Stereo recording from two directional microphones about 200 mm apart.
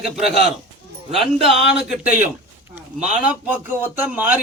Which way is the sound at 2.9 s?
35° right (ahead or behind).